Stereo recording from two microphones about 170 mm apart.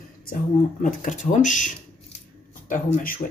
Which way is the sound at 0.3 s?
50° left (ahead or behind).